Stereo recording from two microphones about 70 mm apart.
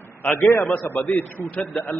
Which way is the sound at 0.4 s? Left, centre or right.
Left.